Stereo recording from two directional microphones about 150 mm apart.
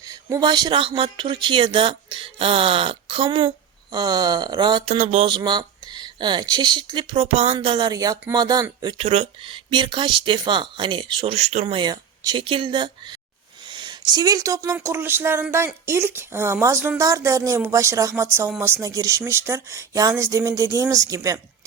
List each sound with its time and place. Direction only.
0.1 s speech: 25° right (ahead or behind)
4.9 s a sound: 45° right (ahead or behind)
5.3 s speech: 30° right (ahead or behind)
9.0 s speech: 45° right (ahead or behind); by 21.4 s 25° right (ahead or behind)